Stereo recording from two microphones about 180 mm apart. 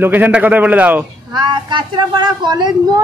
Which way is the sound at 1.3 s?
25° right (ahead or behind).